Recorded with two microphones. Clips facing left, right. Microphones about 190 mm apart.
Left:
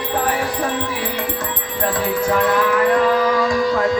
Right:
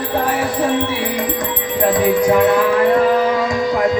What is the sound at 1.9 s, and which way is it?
Music, 15° right (ahead or behind).